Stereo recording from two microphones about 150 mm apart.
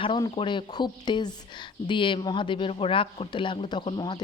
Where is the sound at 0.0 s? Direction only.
35° left (ahead or behind).